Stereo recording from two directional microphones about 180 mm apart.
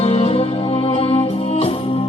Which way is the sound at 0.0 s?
35° left (ahead or behind).